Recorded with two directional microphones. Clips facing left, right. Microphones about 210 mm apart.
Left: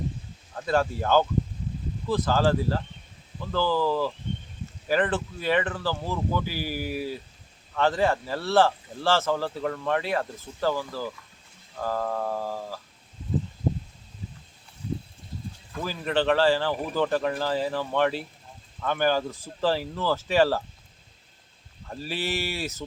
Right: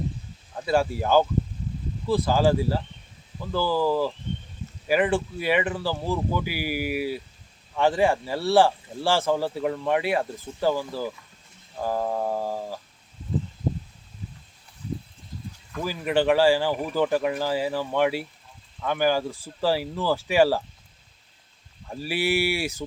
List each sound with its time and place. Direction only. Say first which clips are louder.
0.5 s speech: right 2 dB; 10° right (ahead or behind)
15.8 s speech: right 3 dB; 10° right (ahead or behind)
21.8 s speech: right 5 dB; 10° right (ahead or behind)